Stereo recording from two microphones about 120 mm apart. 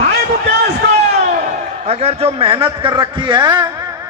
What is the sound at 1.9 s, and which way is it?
A man's voice, 55° right (ahead or behind).